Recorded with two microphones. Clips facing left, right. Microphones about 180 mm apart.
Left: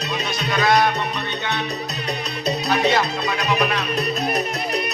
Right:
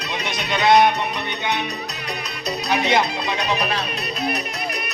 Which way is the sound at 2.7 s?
20° right (ahead or behind).